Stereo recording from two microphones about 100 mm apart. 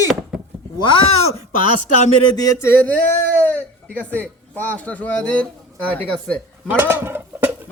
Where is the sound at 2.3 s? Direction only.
35° left (ahead or behind).